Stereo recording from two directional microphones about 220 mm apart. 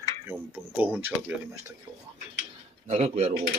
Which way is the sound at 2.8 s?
30° right (ahead or behind).